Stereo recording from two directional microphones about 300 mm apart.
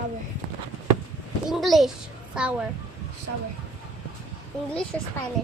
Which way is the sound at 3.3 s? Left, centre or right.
Right.